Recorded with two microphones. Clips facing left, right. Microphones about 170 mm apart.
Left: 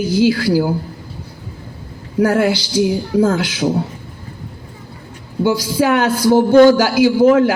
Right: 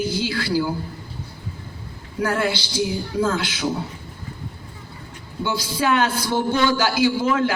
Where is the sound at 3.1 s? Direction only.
60° left (ahead or behind).